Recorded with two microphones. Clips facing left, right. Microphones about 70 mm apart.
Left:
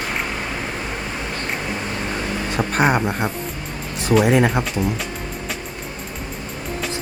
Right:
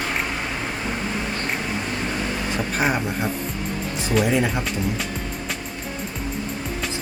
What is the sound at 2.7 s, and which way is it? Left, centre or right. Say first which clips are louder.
Speech: left 6 dB; left.